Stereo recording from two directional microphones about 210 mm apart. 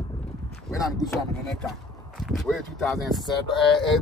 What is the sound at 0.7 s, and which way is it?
Speech, 20° left (ahead or behind).